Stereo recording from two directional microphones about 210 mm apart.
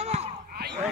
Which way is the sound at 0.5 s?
50° right (ahead or behind).